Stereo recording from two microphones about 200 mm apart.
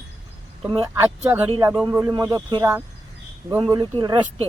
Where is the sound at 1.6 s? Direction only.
15° right (ahead or behind).